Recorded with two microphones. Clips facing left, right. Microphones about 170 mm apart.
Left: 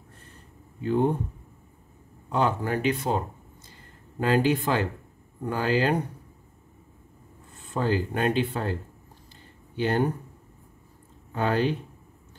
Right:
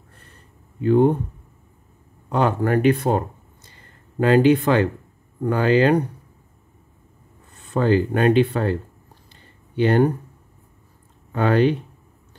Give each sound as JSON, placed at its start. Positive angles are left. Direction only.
{"t": 0.8, "sound": "speech", "side_deg": -60}
{"t": 2.3, "sound": "speech", "side_deg": -60}
{"t": 4.2, "sound": "speech", "side_deg": -70}
{"t": 7.7, "sound": "speech", "side_deg": -70}
{"t": 9.8, "sound": "speech", "side_deg": -65}
{"t": 11.3, "sound": "speech", "side_deg": -70}